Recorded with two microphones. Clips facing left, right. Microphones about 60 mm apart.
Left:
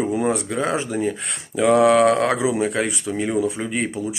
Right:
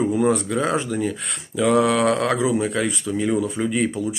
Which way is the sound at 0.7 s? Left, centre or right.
Left.